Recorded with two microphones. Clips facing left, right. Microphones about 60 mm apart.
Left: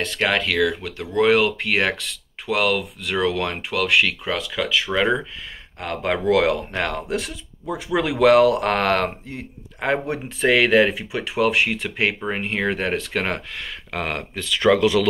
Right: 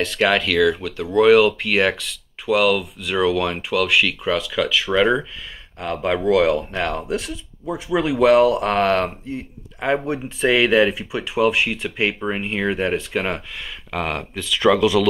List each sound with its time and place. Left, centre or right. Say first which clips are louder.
0.0 s speech: right 3 dB; left
5.8 s a man's voice: right 2 dB; left
7.9 s a man's voice: even; left
13.9 s speech: right 2 dB; left